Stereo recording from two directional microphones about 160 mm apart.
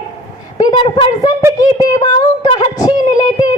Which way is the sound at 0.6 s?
30° left (ahead or behind).